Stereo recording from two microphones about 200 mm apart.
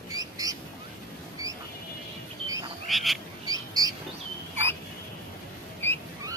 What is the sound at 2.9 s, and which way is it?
Frog, centre (ahead or behind).